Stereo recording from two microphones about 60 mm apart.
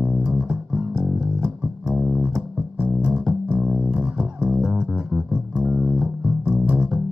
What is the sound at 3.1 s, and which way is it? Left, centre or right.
Music, centre.